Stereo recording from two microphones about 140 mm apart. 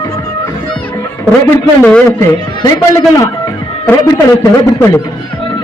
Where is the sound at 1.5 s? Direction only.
10° left (ahead or behind).